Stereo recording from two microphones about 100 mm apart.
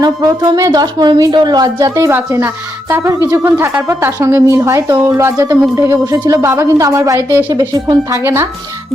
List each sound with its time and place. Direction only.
0.0 s speech: 40° right (ahead or behind)
2.0 s a woman's voice: 25° right (ahead or behind)
8.2 s a woman's voice: 25° right (ahead or behind)